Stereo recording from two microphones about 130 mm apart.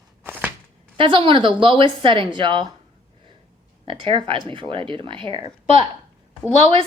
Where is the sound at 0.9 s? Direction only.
40° right (ahead or behind).